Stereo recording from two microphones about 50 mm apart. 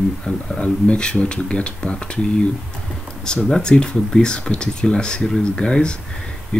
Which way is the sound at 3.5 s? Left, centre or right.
Centre.